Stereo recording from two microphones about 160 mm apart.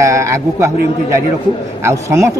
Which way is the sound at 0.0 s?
20° right (ahead or behind).